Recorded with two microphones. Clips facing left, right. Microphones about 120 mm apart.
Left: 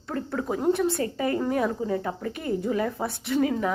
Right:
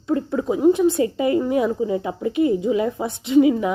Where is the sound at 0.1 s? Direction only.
15° right (ahead or behind).